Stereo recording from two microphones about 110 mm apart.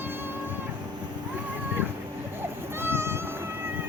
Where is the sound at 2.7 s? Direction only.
20° right (ahead or behind).